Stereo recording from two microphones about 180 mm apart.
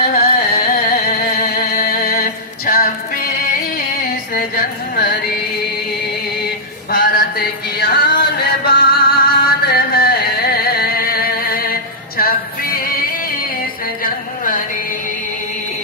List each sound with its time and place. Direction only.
0.0 s carnatic music: 35° left (ahead or behind)
0.3 s singing: 55° left (ahead or behind)
4.4 s carnatic music: 55° left (ahead or behind)
6.9 s music: 55° left (ahead or behind)
14.0 s a sound: 50° left (ahead or behind)